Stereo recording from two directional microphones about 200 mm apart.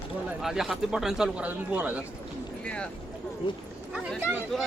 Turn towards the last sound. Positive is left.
turn(degrees=-5)  # may be behind; listen again after turning